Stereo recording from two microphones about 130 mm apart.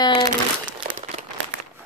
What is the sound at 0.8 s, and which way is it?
Crumpling, 90° right.